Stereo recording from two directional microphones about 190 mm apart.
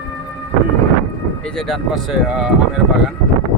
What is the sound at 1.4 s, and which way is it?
Speech, centre (ahead or behind).